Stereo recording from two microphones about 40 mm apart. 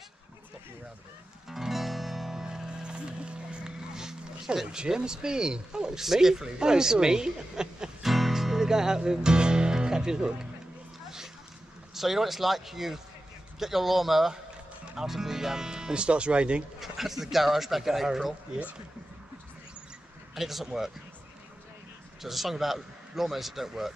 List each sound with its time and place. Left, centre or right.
1.5 s music: centre
4.6 s speech: right
8.1 s music: centre
11.9 s a man's voice: centre; by 16.6 s right
16.8 s speech: centre
20.3 s speech: centre
22.2 s a man's voice: centre